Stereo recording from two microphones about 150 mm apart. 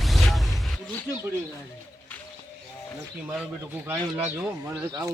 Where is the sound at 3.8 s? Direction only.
15° right (ahead or behind).